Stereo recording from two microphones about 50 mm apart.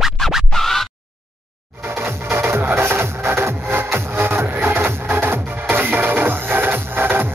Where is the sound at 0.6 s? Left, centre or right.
Centre.